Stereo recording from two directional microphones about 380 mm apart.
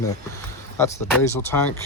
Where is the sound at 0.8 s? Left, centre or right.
Centre.